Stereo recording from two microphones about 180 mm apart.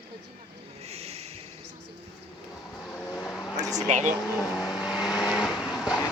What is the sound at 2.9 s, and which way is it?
Vehicle, 10° left (ahead or behind).